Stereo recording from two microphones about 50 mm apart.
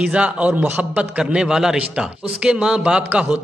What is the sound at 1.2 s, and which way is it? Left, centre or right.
A man's voice, centre.